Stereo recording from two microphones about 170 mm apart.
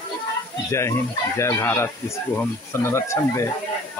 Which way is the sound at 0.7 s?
15° left (ahead or behind).